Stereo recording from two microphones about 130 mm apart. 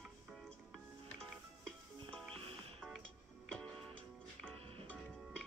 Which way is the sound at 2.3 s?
45° right (ahead or behind).